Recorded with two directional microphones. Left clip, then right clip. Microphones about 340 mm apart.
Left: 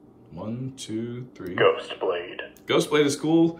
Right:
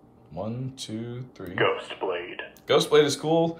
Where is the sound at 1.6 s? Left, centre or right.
Centre.